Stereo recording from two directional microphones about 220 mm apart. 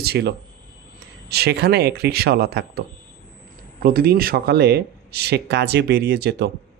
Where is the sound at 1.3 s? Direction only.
45° right (ahead or behind).